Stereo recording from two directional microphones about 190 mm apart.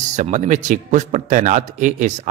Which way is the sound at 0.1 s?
40° right (ahead or behind).